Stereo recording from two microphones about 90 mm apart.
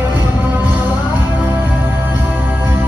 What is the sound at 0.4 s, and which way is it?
Music, 20° right (ahead or behind).